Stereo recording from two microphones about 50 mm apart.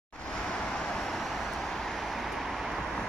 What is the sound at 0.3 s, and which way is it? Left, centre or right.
Vehicle, centre.